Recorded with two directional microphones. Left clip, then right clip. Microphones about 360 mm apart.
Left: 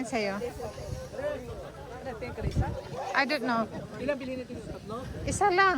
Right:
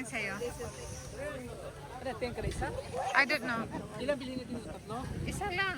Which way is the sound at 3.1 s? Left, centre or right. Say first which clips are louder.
Left 2 dB; centre.